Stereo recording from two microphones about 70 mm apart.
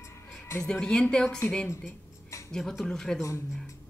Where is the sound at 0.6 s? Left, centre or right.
Centre.